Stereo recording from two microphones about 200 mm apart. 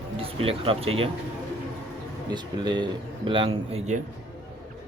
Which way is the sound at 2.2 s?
20° right (ahead or behind).